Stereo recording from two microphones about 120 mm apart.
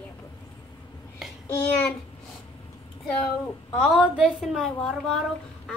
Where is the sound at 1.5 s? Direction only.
20° left (ahead or behind).